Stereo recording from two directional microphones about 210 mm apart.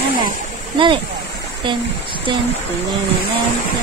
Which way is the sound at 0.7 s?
25° right (ahead or behind).